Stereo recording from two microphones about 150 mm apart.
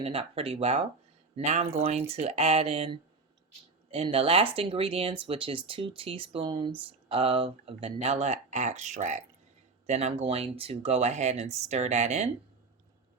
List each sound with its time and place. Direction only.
0.0 s speech: 40° right (ahead or behind)